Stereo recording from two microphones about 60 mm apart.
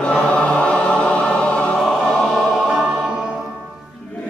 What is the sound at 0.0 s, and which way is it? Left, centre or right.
Choir, left.